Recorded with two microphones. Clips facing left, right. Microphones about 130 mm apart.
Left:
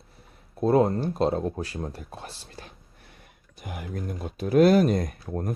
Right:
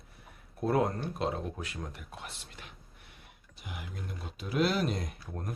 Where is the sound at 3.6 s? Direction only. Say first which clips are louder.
Left 9 dB; 50° left (ahead or behind).